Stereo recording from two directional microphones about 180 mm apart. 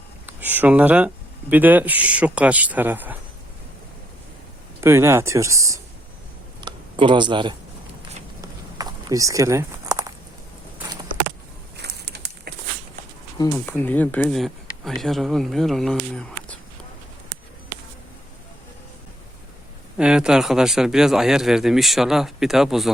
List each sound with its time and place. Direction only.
0.3 s speech: 10° right (ahead or behind)
4.8 s speech: 15° right (ahead or behind)
6.6 s a sound: 25° right (ahead or behind)
11.8 s a sound: 65° right (ahead or behind)
13.4 s speech: 10° left (ahead or behind)
20.0 s speech: 5° right (ahead or behind)